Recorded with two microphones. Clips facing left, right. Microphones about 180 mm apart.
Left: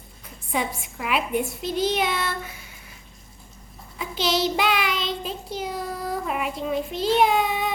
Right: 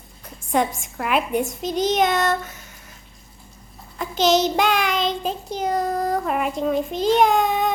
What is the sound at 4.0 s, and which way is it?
Child singing, 45° right (ahead or behind).